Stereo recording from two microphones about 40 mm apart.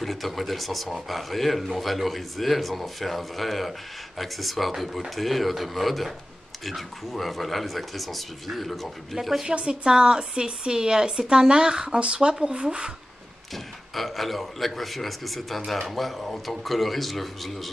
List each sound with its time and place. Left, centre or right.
0.0 s speech: centre
9.5 s speech: right
13.9 s speech: centre